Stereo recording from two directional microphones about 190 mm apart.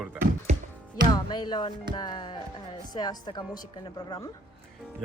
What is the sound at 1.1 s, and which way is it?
Music, 25° left (ahead or behind).